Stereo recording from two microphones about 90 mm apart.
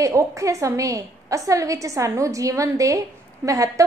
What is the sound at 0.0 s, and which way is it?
A woman's voice, 35° right (ahead or behind).